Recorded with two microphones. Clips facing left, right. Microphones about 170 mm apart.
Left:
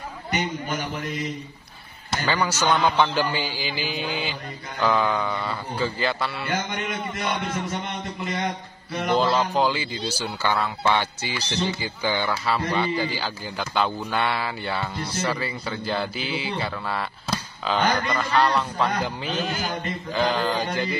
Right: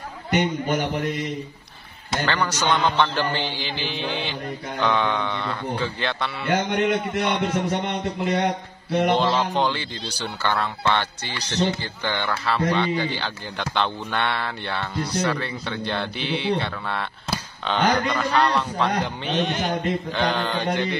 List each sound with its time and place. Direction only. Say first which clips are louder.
0.3 s a man's voice: right 5 dB; 60° right (ahead or behind)
2.2 s speech: left 1 dB; 5° left (ahead or behind)
6.5 s a man's voice: right 12 dB; 65° right (ahead or behind)
9.2 s speech: even; centre (ahead or behind)